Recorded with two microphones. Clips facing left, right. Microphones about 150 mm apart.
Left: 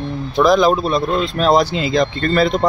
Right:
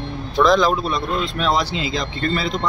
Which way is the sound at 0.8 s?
35° left (ahead or behind).